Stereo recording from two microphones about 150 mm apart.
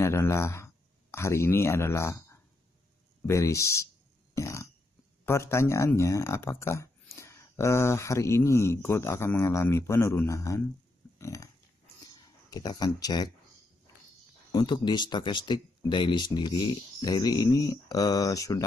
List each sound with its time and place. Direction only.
0.0 s speech: 20° left (ahead or behind)
11.1 s a sound: 20° left (ahead or behind)
12.1 s speech: 25° left (ahead or behind)
14.5 s speech: 30° left (ahead or behind)